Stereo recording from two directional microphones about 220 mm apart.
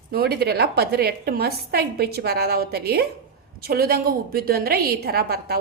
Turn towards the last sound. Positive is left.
turn(degrees=-45)  # may be behind; listen again after turning